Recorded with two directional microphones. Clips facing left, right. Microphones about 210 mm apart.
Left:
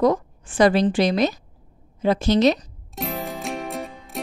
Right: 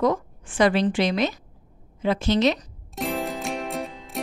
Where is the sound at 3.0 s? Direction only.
Centre (ahead or behind).